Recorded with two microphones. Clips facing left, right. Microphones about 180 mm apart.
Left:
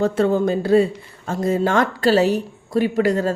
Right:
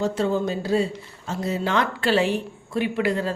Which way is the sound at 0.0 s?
55° left (ahead or behind).